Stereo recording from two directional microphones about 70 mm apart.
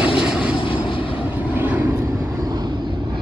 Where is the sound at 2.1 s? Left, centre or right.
Right.